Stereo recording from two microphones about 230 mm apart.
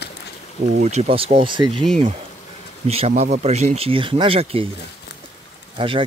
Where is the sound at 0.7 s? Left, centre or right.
Right.